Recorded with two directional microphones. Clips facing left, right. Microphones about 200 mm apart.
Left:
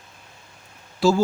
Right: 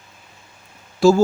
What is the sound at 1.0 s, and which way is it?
Speech, 45° right (ahead or behind).